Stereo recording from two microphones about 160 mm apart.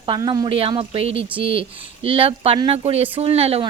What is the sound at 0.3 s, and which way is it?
Speech, 30° right (ahead or behind).